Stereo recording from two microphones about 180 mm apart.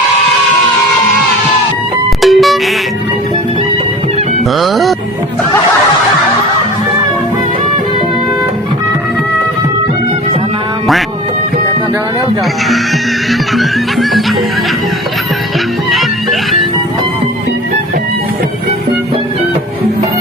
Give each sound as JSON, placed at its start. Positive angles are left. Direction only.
{"t": 2.2, "sound": "music", "side_deg": 0}
{"t": 4.5, "sound": "music", "side_deg": 0}
{"t": 13.5, "sound": "music", "side_deg": 0}
{"t": 15.9, "sound": "music", "side_deg": 0}